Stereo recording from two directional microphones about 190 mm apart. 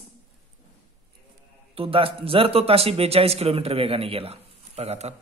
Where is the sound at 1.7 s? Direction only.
30° right (ahead or behind).